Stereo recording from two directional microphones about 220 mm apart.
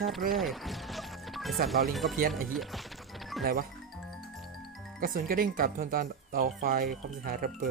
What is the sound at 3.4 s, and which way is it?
Speech, 40° right (ahead or behind).